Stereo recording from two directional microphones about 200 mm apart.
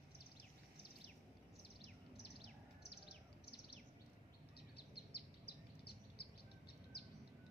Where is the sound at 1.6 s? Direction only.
55° left (ahead or behind).